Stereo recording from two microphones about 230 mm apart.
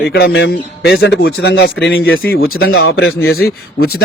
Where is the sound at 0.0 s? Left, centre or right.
Left.